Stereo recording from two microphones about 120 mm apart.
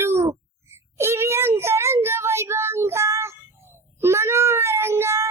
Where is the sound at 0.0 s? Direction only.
20° right (ahead or behind).